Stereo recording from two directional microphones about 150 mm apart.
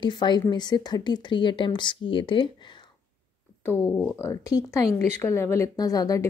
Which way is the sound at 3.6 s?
15° left (ahead or behind).